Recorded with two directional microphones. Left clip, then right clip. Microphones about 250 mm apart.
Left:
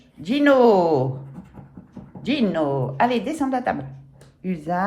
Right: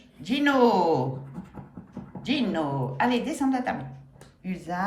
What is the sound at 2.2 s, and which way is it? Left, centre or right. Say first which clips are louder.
Speech: left 5 dB; centre.